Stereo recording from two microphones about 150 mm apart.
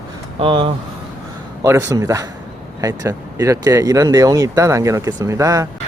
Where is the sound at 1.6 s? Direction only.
20° right (ahead or behind).